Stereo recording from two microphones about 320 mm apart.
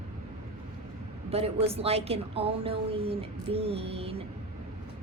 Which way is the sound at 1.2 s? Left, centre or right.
Centre.